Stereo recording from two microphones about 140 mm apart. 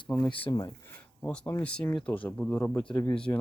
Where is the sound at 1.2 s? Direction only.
5° left (ahead or behind).